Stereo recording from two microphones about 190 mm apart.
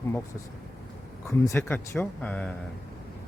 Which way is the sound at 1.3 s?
15° left (ahead or behind).